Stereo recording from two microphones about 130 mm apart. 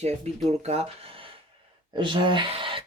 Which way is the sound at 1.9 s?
40° right (ahead or behind).